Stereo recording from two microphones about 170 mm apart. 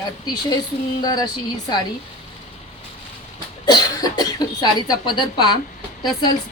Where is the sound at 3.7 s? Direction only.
25° left (ahead or behind).